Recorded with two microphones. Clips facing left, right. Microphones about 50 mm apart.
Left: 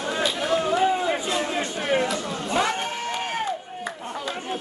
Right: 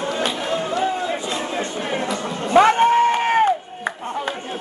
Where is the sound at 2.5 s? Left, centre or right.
Right.